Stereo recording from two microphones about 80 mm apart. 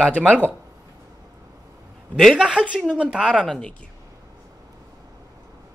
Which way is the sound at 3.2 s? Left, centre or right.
Centre.